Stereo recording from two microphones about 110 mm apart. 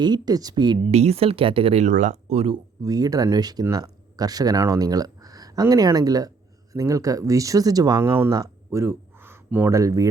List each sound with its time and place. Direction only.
0.0 s speech: 40° right (ahead or behind)
0.9 s speech: 75° right (ahead or behind)
2.8 s speech: 35° right (ahead or behind)
8.0 s speech: 20° right (ahead or behind)
8.3 s a sound: 30° right (ahead or behind)
9.7 s speech: 30° right (ahead or behind)